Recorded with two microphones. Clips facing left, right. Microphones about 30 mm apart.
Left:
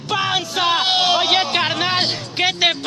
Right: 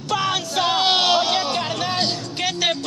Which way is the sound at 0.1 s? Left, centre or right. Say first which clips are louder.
Left 2 dB; centre.